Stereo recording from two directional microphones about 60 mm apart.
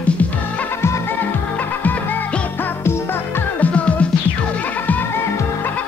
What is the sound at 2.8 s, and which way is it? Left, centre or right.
Music, left.